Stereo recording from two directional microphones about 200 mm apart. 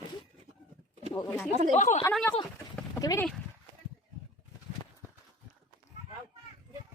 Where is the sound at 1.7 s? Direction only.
35° left (ahead or behind).